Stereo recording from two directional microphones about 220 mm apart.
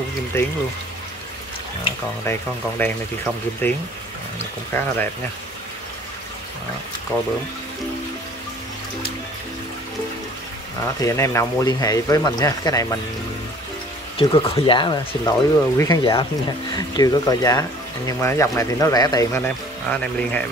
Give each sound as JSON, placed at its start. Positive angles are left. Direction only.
{"t": 3.6, "sound": "speech", "side_deg": 10}
{"t": 7.1, "sound": "speech", "side_deg": 10}
{"t": 10.8, "sound": "speech", "side_deg": 15}
{"t": 14.1, "sound": "speech", "side_deg": 25}